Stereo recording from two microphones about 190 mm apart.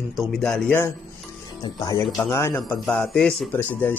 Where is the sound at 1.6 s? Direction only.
20° left (ahead or behind).